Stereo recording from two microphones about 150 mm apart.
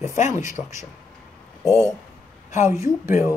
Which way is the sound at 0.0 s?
55° left (ahead or behind).